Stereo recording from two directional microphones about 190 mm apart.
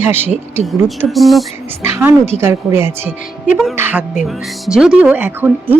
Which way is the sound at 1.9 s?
10° right (ahead or behind).